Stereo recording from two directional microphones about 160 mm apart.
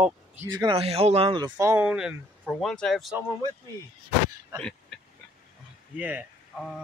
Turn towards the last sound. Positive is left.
turn(degrees=-10)  # may be behind; listen again after turning